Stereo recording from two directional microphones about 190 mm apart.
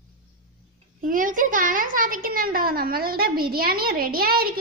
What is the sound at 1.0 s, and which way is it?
Speech, 45° right (ahead or behind).